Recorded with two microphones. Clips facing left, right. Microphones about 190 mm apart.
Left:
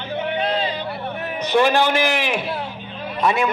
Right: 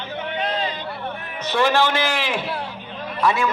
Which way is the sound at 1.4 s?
15° left (ahead or behind).